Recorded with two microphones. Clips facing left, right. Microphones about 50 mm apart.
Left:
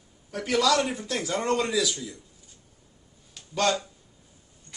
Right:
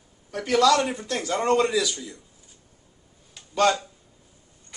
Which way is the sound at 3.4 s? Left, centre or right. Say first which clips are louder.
Right 4 dB; centre.